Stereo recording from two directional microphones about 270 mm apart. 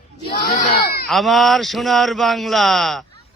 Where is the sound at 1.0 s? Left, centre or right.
Centre.